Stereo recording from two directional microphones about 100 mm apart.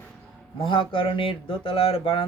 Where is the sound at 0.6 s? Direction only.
60° left (ahead or behind).